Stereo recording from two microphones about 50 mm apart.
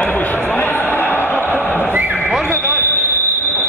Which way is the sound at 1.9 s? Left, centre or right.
Right.